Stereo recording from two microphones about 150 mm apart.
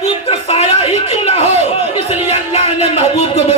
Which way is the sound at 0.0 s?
45° left (ahead or behind).